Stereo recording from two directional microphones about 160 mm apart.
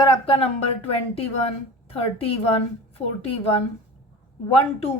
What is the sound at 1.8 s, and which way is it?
A woman's voice, 35° left (ahead or behind).